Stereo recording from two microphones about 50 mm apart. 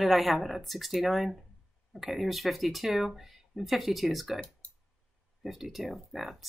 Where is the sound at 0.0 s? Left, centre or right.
Centre.